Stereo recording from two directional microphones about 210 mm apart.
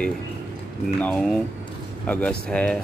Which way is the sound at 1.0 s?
5° left (ahead or behind).